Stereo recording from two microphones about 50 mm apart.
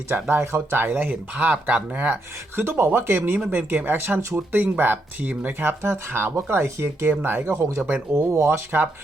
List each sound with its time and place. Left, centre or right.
0.3 s speech: right
1.1 s speech: right
2.6 s speech: right
7.1 s speech: right
7.5 s speech: right
8.4 s speech: right